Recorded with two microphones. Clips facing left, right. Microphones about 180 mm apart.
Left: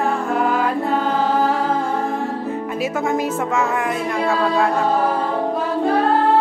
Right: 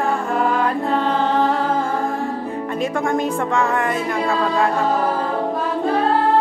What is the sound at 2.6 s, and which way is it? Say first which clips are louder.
Speech: right 2 dB; 5° left (ahead or behind).